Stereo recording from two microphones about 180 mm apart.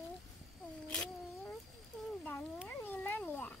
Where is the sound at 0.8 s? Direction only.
5° left (ahead or behind).